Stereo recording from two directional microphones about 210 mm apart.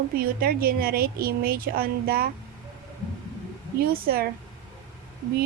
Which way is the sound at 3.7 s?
45° right (ahead or behind).